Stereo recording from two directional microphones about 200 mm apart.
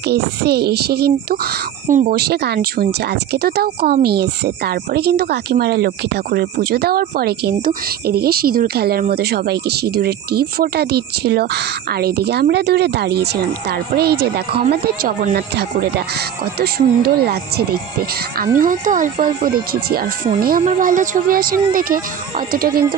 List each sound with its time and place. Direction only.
0.1 s speech: 55° right (ahead or behind)
18.6 s speech: 40° right (ahead or behind)
20.3 s speech: 45° right (ahead or behind)